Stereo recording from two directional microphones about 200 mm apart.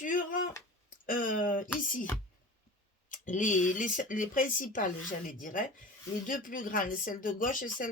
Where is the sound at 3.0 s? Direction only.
40° left (ahead or behind).